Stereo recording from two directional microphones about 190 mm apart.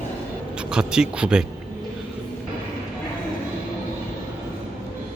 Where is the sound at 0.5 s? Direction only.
5° right (ahead or behind).